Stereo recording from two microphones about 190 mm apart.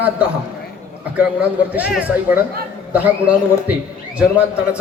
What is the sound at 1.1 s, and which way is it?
A man's voice, 5° right (ahead or behind).